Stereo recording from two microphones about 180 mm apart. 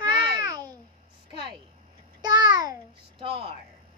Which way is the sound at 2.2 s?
20° right (ahead or behind).